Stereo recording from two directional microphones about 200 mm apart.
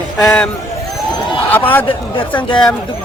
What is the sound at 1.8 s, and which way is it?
Speech, 25° left (ahead or behind).